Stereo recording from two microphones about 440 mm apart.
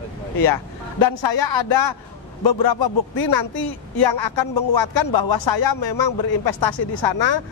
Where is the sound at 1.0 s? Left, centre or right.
Left.